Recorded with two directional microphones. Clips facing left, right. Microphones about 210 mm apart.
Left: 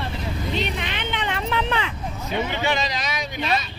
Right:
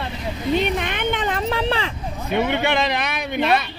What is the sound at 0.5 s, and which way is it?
Vehicle, 50° right (ahead or behind).